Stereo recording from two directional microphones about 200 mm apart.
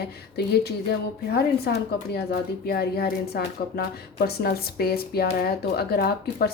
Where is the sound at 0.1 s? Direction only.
55° left (ahead or behind).